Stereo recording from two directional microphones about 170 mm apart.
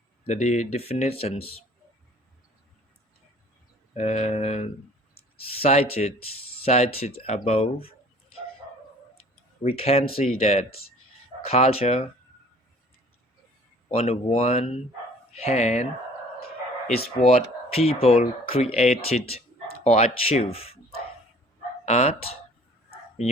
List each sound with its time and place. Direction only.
0.3 s speech: 40° left (ahead or behind)
3.9 s speech: 40° left (ahead or behind)
9.6 s speech: 35° left (ahead or behind)
13.8 s speech: 35° left (ahead or behind)
17.2 s speech: 35° left (ahead or behind)
21.8 s speech: 40° left (ahead or behind)